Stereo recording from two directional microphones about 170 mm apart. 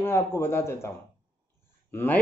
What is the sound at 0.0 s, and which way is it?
A man's voice, 15° left (ahead or behind).